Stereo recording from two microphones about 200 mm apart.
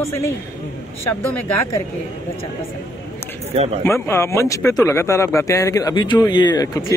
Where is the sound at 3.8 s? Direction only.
15° left (ahead or behind).